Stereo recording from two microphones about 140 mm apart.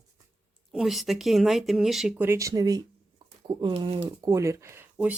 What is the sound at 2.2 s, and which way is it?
Speech, 20° right (ahead or behind).